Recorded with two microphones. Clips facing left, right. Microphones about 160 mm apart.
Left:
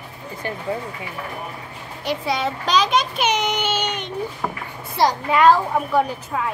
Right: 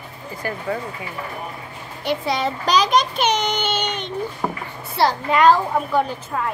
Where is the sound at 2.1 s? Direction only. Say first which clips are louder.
Right 1 dB; 5° left (ahead or behind).